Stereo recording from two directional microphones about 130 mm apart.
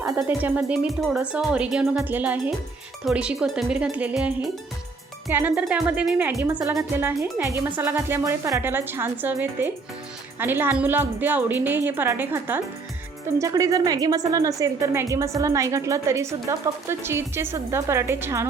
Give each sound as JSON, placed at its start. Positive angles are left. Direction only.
{"t": 0.0, "sound": "speech", "side_deg": -20}
{"t": 5.3, "sound": "a woman's voice", "side_deg": -15}